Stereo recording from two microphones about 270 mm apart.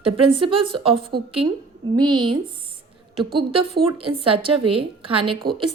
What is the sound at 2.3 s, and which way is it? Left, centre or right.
A woman's voice, centre.